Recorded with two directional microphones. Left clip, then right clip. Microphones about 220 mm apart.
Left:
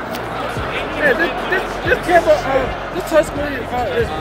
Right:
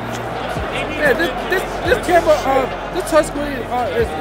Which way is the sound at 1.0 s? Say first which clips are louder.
Left 1 dB; 25° right (ahead or behind).